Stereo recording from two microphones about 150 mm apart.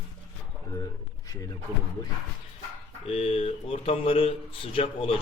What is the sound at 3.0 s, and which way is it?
Speech, 45° left (ahead or behind).